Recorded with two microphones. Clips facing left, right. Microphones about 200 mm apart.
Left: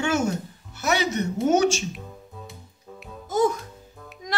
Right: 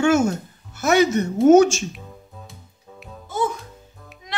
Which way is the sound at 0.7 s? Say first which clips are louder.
Right 7 dB; 50° right (ahead or behind).